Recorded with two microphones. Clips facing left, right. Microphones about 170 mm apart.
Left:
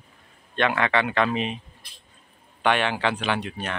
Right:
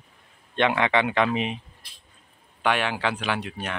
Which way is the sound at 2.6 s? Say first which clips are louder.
Left 2 dB; 5° right (ahead or behind).